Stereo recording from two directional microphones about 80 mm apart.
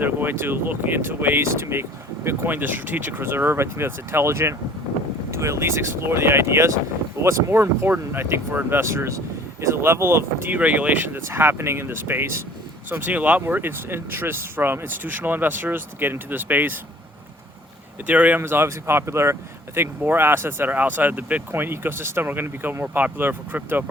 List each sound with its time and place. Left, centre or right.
0.0 s speech: right
10.5 s speech: centre
18.0 s speech: centre